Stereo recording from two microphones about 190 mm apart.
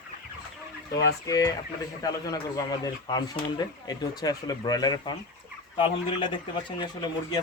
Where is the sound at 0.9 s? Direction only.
60° left (ahead or behind).